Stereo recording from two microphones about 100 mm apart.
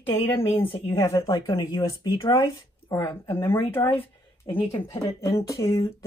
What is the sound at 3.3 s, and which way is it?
Speech, 20° left (ahead or behind).